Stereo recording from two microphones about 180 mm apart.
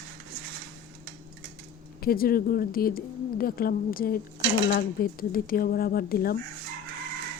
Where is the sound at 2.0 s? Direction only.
55° left (ahead or behind).